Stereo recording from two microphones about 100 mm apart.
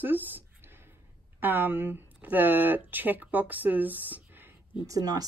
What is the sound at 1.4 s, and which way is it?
Speech, 20° right (ahead or behind).